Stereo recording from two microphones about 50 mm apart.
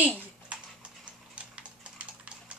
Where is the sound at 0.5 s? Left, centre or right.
Right.